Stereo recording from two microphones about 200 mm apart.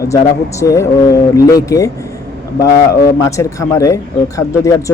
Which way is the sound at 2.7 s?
50° left (ahead or behind).